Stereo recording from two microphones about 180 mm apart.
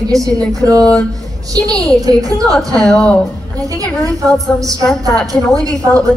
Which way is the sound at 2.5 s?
5° left (ahead or behind).